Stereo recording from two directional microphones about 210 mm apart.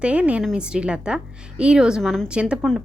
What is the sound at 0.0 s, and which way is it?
A woman's voice, 5° right (ahead or behind).